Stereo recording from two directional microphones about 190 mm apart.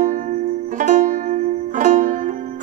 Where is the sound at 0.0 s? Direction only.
40° right (ahead or behind).